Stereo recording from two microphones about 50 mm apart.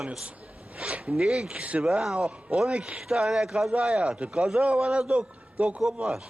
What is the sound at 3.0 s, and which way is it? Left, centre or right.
Speech, centre.